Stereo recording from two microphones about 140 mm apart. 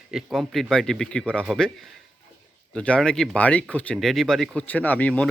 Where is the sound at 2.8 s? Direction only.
10° left (ahead or behind).